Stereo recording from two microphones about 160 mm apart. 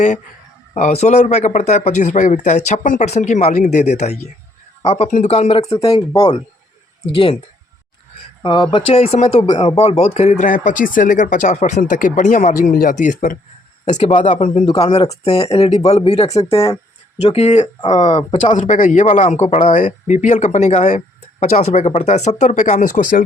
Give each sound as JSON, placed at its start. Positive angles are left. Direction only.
{"t": 0.8, "sound": "speech", "side_deg": 45}
{"t": 5.8, "sound": "speech", "side_deg": 25}
{"t": 8.4, "sound": "speech", "side_deg": 25}
{"t": 8.7, "sound": "speech", "side_deg": 40}
{"t": 13.8, "sound": "speech", "side_deg": 40}
{"t": 14.7, "sound": "speech", "side_deg": 30}
{"t": 18.5, "sound": "speech", "side_deg": 50}